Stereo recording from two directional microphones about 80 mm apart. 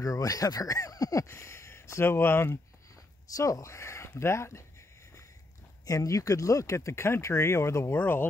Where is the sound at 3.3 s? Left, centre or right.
Left.